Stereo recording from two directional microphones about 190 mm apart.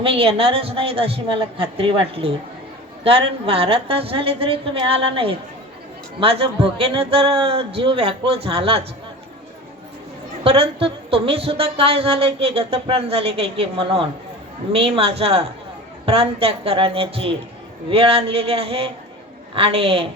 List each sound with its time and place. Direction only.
0.0 s a man's voice: 30° right (ahead or behind)
10.4 s a man's voice: 30° right (ahead or behind)